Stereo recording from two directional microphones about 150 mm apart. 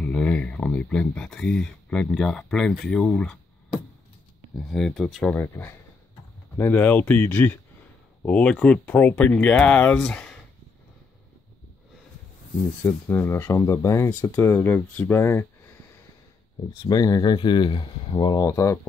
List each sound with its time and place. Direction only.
0.0 s speech: 5° left (ahead or behind)
4.6 s speech: 5° left (ahead or behind)
12.8 s speech: 15° left (ahead or behind)
16.8 s speech: 25° left (ahead or behind)